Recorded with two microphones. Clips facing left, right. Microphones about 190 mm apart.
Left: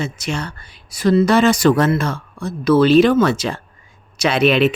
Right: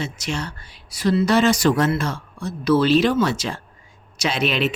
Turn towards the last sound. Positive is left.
turn(degrees=60)  # may be behind; listen again after turning